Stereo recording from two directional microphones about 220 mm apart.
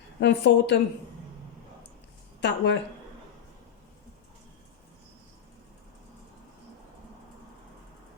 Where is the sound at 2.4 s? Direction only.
55° left (ahead or behind).